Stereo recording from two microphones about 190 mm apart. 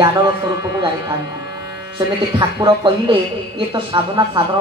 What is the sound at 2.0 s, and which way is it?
Speech, 25° right (ahead or behind).